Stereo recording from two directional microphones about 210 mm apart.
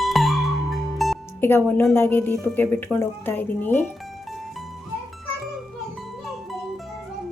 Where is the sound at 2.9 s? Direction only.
10° left (ahead or behind).